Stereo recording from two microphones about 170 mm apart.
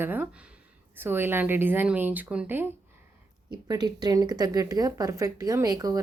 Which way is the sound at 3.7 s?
25° right (ahead or behind).